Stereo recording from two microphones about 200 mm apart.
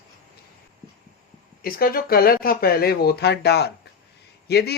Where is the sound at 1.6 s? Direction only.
45° left (ahead or behind).